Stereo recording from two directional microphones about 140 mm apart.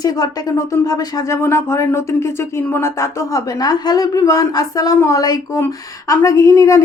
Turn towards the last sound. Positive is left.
turn(degrees=25)  # may be behind; listen again after turning